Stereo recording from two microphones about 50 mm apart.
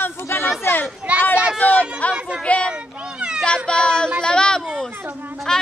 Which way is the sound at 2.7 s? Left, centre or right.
Centre.